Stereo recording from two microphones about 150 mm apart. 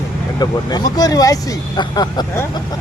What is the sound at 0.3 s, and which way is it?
Speech, 25° left (ahead or behind).